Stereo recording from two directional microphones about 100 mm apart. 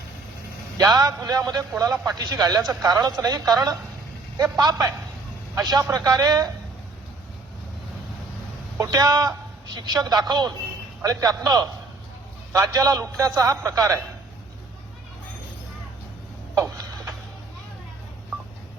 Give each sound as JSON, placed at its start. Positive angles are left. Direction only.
{"t": 0.8, "sound": "speech", "side_deg": -40}
{"t": 8.8, "sound": "a woman's voice", "side_deg": -40}
{"t": 16.6, "sound": "tick-tock", "side_deg": -35}